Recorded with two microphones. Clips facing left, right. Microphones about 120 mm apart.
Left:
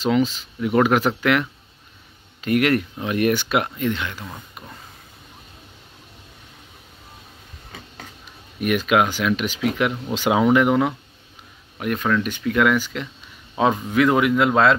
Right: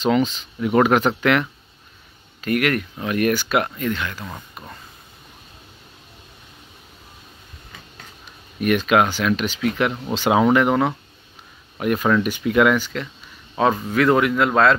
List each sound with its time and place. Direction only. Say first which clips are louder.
0.0 s speech: right 1 dB; 5° left (ahead or behind)
2.4 s speech: left 2 dB; 25° left (ahead or behind)
8.5 s speech: right 1 dB; 5° left (ahead or behind)
11.8 s speech: right 3 dB; 5° right (ahead or behind)
12.7 s speech: even; 10° left (ahead or behind)